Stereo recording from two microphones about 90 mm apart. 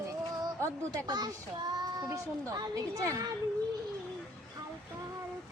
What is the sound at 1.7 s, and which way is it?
A child's voice, 40° right (ahead or behind).